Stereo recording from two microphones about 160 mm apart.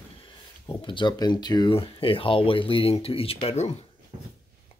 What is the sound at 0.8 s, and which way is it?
Speech, 30° left (ahead or behind).